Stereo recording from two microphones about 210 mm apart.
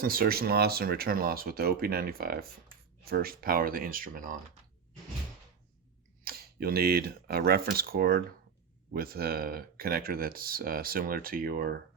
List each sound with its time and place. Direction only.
0.0 s speech: 45° right (ahead or behind)
6.2 s speech: 45° right (ahead or behind)